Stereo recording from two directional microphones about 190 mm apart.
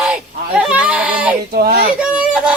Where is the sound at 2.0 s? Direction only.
5° right (ahead or behind).